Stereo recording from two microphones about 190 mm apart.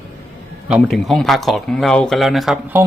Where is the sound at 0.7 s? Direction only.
Centre (ahead or behind).